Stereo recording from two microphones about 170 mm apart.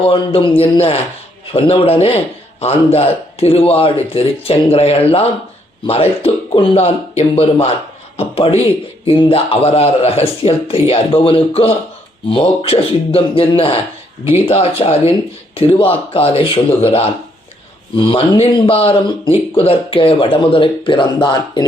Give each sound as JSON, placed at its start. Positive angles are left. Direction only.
{"t": 0.0, "sound": "speech", "side_deg": 30}